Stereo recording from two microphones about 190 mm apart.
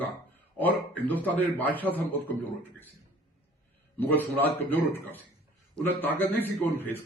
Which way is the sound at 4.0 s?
10° left (ahead or behind).